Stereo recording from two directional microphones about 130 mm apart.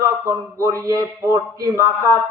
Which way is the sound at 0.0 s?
20° right (ahead or behind).